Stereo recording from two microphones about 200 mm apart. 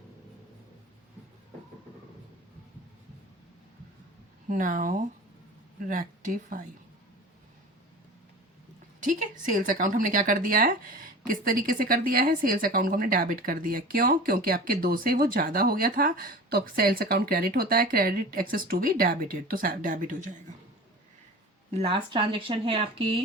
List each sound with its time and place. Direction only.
4.4 s speech: 40° right (ahead or behind)
9.0 s speech: 40° right (ahead or behind)
21.7 s speech: 30° right (ahead or behind)